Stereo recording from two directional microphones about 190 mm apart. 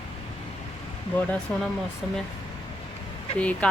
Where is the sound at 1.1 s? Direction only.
5° left (ahead or behind).